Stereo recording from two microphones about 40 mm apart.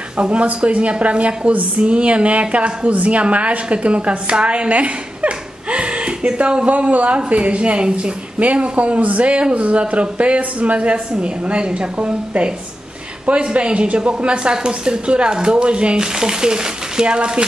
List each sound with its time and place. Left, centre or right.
0.2 s a woman's voice: right